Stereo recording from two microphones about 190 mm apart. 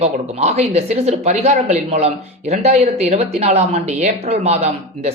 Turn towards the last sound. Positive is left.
turn(degrees=-35)  # may be behind; listen again after turning